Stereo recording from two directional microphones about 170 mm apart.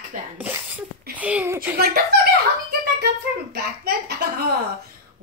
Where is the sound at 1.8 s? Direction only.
70° right (ahead or behind).